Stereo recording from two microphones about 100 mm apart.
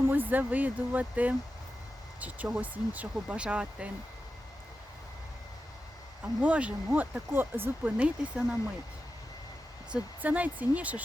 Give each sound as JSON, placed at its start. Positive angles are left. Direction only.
{"t": 0.1, "sound": "speech", "side_deg": -20}
{"t": 2.6, "sound": "speech", "side_deg": -15}
{"t": 6.2, "sound": "speech", "side_deg": -15}
{"t": 9.9, "sound": "speech", "side_deg": -15}